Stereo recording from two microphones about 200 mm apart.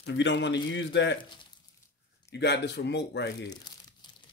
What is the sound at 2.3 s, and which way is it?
A man's voice, 55° left (ahead or behind).